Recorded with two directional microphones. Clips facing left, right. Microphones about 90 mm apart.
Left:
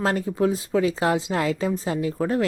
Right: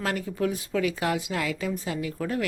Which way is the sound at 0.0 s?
30° left (ahead or behind).